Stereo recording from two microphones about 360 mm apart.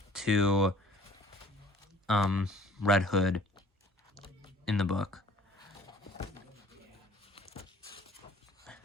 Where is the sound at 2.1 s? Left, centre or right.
Centre.